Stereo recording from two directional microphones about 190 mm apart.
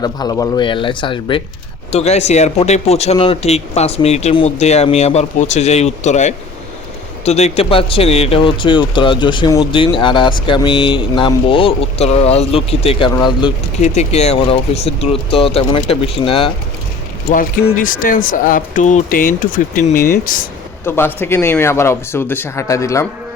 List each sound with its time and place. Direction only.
0.0 s a man's voice: 20° left (ahead or behind)
13.8 s a man's voice: 35° left (ahead or behind)
17.7 s speech: 45° left (ahead or behind)
20.8 s speech: 10° left (ahead or behind)